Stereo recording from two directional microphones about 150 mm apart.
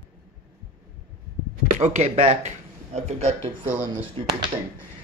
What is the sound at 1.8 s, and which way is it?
Speech, 50° right (ahead or behind).